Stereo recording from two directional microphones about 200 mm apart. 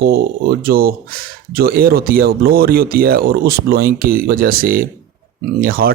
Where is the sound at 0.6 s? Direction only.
50° right (ahead or behind).